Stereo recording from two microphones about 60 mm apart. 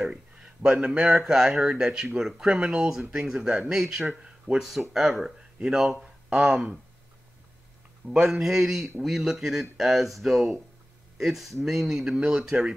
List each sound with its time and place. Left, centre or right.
0.0 s a sound: centre
1.1 s speech: centre
8.1 s speech: centre